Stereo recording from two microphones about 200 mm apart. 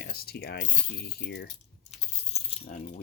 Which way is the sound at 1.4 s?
30° left (ahead or behind).